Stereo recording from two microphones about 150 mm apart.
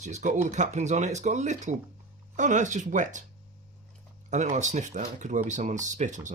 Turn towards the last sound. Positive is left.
turn(degrees=-55)  # may be behind; listen again after turning